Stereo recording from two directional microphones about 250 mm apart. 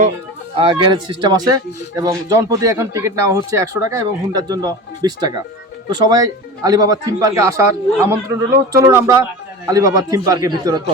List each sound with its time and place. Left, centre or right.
0.5 s speech: centre